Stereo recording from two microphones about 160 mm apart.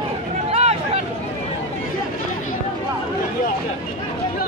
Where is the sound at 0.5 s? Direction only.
40° right (ahead or behind).